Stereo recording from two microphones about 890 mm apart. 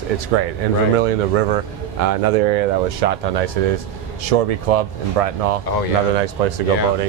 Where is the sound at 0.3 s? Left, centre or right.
Right.